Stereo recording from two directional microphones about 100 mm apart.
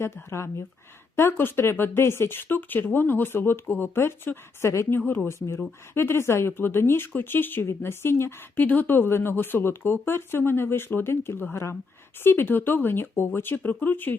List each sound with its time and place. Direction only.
0.0 s speech: 25° left (ahead or behind)